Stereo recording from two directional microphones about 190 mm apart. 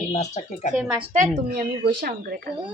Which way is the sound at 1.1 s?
40° right (ahead or behind).